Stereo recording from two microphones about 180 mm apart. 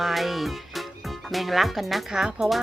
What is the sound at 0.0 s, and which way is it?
Speech, centre (ahead or behind).